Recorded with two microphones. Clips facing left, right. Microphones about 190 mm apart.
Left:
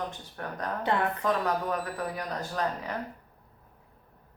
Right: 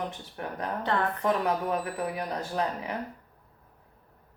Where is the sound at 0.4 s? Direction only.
15° right (ahead or behind).